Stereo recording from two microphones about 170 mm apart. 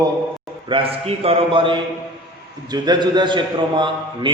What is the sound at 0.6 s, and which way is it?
A man's voice, 30° right (ahead or behind).